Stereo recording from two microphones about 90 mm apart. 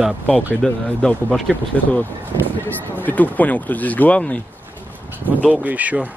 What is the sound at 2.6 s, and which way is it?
Speech, 20° left (ahead or behind).